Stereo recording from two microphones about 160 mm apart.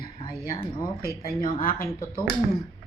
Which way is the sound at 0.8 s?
65° left (ahead or behind).